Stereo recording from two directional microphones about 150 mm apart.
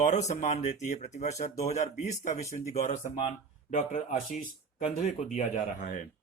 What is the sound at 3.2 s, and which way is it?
Speech, 55° left (ahead or behind).